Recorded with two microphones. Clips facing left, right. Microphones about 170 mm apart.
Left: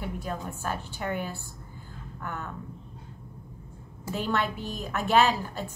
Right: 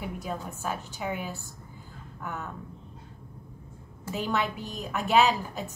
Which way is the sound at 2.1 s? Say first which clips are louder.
Even; centre (ahead or behind).